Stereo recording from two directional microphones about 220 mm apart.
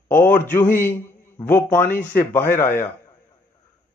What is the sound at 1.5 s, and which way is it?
Speech, 10° left (ahead or behind).